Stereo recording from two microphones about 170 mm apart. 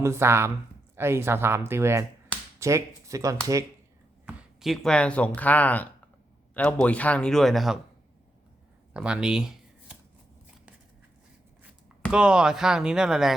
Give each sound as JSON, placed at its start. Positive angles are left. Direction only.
{"t": 0.0, "sound": "speech", "side_deg": -15}
{"t": 4.3, "sound": "speech", "side_deg": -5}
{"t": 8.9, "sound": "shuffling cards", "side_deg": -5}
{"t": 12.1, "sound": "speech", "side_deg": -5}